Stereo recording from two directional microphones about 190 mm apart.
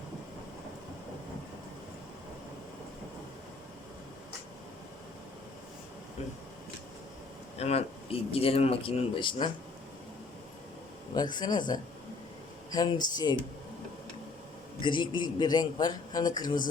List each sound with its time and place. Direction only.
7.6 s speech: 35° left (ahead or behind)
11.1 s a man's voice: 20° left (ahead or behind)
14.8 s a man's voice: 25° left (ahead or behind)